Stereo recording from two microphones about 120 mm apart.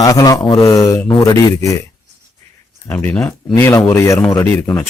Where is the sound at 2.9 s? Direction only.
10° left (ahead or behind).